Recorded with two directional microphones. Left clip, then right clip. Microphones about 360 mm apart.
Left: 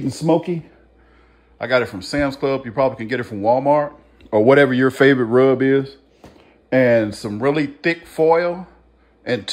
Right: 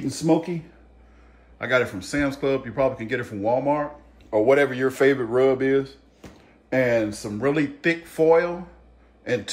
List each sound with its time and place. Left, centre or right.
0.0 s speech: left
1.6 s speech: centre